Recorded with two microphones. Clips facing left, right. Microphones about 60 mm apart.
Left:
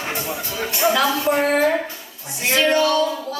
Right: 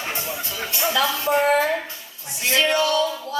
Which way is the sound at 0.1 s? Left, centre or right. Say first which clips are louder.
Left 3 dB; left.